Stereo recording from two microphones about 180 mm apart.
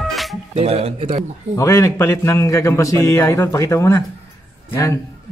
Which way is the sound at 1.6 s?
15° left (ahead or behind).